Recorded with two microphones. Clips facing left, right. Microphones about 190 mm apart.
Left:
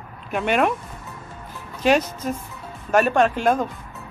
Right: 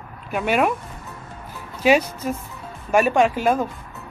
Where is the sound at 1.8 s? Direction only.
10° right (ahead or behind).